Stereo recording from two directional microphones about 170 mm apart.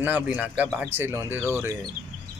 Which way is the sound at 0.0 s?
10° right (ahead or behind).